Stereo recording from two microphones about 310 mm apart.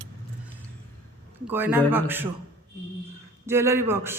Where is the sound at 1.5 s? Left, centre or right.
Centre.